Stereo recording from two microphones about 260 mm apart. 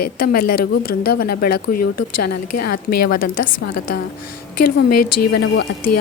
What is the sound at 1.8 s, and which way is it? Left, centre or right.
Speech, left.